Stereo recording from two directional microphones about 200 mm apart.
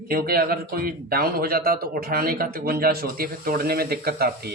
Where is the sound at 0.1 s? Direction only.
50° right (ahead or behind).